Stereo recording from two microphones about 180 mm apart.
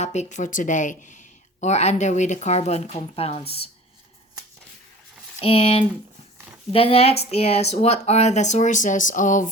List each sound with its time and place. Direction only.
0.0 s speech: 40° left (ahead or behind)
5.4 s speech: 30° left (ahead or behind)